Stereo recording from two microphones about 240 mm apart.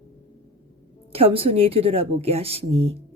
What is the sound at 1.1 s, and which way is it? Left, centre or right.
A woman's voice, right.